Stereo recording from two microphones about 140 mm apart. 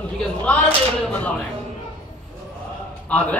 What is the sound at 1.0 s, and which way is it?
Speech, 10° left (ahead or behind).